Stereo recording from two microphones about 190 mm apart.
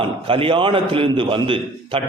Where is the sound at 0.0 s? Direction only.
30° right (ahead or behind).